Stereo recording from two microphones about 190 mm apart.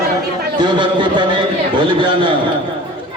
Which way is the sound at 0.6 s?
25° right (ahead or behind).